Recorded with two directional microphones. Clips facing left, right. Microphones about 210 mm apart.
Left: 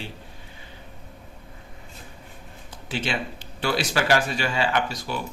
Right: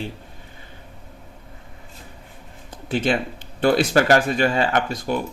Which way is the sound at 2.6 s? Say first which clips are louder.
Right 8 dB; 50° right (ahead or behind).